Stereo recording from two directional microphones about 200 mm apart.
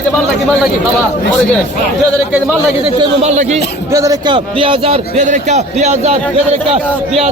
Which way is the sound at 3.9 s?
15° right (ahead or behind).